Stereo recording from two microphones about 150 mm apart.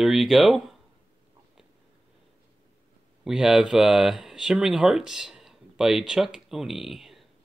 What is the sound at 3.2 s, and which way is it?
Speech, 5° right (ahead or behind).